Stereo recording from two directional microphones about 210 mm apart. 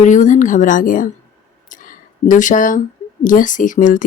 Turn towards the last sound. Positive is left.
turn(degrees=40)  # may be behind; listen again after turning